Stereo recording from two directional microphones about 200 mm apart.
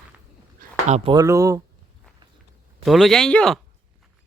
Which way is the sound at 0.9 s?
35° right (ahead or behind).